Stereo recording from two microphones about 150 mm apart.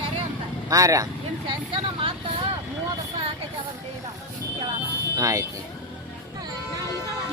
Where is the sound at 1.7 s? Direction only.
35° right (ahead or behind).